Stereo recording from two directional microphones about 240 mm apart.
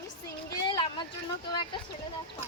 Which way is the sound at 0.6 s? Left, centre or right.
Centre.